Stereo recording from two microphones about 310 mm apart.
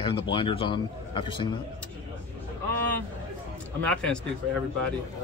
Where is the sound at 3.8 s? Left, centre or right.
Centre.